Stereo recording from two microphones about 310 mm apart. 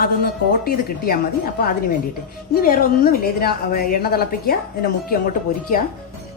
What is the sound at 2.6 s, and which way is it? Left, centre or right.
A woman's voice, left.